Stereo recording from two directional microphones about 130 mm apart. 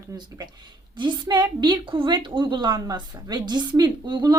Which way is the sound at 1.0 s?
35° right (ahead or behind).